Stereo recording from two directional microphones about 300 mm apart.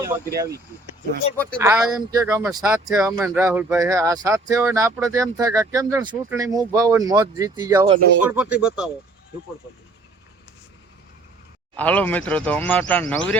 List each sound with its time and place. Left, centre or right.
0.3 s speech: centre
1.6 s speech: centre
11.8 s speech: centre